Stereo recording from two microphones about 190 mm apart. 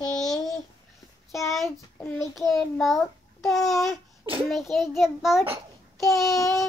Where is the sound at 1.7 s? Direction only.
10° left (ahead or behind).